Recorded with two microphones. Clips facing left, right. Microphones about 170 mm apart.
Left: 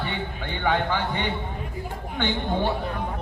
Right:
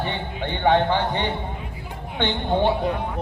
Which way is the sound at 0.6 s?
25° right (ahead or behind).